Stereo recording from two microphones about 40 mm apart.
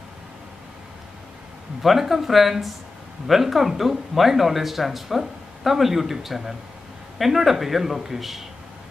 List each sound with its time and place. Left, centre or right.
1.8 s speech: centre